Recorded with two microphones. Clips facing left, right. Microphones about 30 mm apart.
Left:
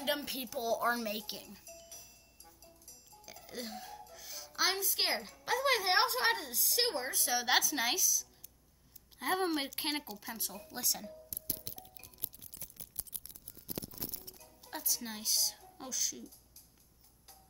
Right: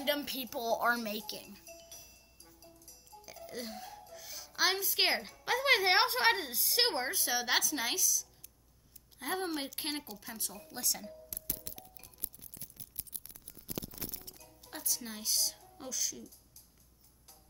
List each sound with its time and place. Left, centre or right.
0.0 s speech: centre
1.9 s music: centre
5.0 s a woman's voice: centre
6.8 s speech: right
7.2 s speech: centre
11.8 s music: left
14.6 s a woman's voice: centre